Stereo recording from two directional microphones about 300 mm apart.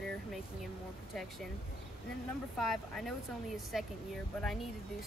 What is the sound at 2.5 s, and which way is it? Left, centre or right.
Speech, centre.